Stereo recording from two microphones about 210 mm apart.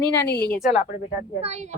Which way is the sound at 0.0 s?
50° left (ahead or behind).